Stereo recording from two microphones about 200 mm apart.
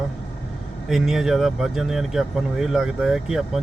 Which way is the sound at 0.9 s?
Centre (ahead or behind).